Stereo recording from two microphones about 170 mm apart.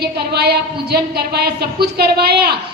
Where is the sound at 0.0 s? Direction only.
70° right (ahead or behind).